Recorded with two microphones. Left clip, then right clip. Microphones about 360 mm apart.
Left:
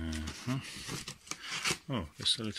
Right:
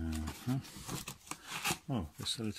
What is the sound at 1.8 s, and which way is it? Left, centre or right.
Speech, centre.